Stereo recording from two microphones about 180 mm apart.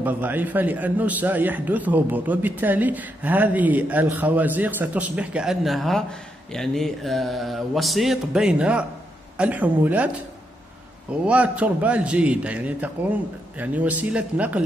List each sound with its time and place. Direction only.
0.0 s a man's voice: 10° right (ahead or behind)
6.5 s mantra: centre (ahead or behind)
9.4 s a man's voice: 10° right (ahead or behind)
11.2 s a man's voice: 5° right (ahead or behind)